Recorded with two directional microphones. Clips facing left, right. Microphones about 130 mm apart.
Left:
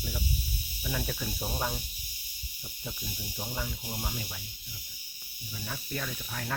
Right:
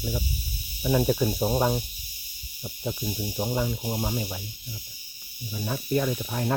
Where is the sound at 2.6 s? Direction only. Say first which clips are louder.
Right 10 dB; 20° right (ahead or behind).